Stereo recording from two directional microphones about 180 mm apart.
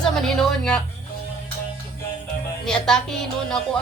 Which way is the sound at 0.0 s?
5° left (ahead or behind).